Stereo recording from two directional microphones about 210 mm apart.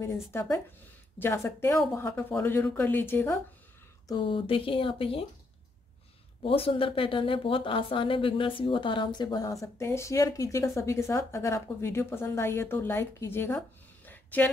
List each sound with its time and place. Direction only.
0.0 s speech: 10° left (ahead or behind)
4.1 s speech: 25° left (ahead or behind)
6.4 s speech: 25° left (ahead or behind); by 14.5 s 10° left (ahead or behind)